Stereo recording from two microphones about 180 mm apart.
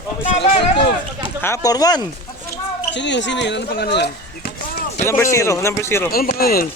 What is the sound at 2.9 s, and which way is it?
Speech, 80° left.